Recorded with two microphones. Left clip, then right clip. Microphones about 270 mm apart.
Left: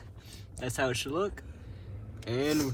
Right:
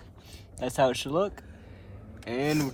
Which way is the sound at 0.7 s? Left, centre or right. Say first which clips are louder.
Right 6 dB; right.